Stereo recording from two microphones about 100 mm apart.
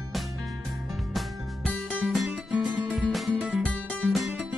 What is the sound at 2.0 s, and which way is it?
Music, 5° right (ahead or behind).